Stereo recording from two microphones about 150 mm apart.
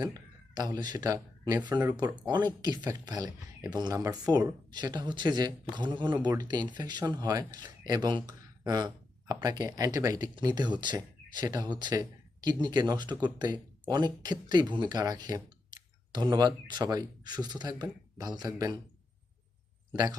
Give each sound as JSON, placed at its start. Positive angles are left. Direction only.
{"t": 0.0, "sound": "speech", "side_deg": -25}